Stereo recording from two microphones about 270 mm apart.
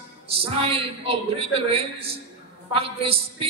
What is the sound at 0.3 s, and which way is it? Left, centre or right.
A woman's voice, right.